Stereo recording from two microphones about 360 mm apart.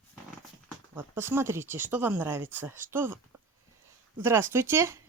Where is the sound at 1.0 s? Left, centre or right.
Centre.